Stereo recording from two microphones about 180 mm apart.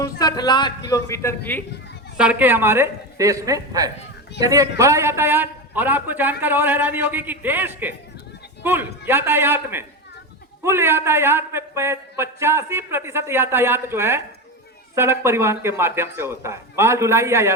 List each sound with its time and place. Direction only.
0.0 s a man's voice: 20° left (ahead or behind)
2.1 s a man's voice: 5° right (ahead or behind)